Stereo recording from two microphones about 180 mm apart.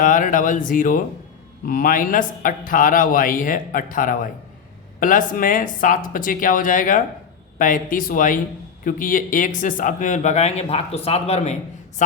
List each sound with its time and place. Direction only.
0.0 s speech: 50° left (ahead or behind)